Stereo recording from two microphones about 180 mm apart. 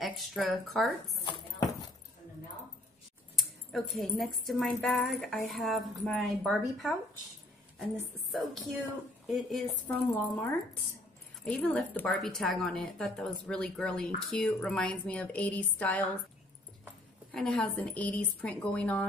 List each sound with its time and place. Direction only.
0.0 s speech: centre (ahead or behind)
1.2 s clip-clop: 20° left (ahead or behind)
3.3 s a woman's voice: centre (ahead or behind)
17.3 s a woman's voice: 5° left (ahead or behind)